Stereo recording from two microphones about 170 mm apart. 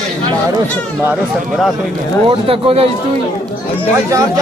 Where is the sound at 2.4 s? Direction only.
35° right (ahead or behind).